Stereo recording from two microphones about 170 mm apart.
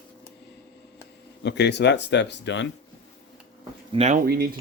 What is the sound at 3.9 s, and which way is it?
Speech, 40° right (ahead or behind).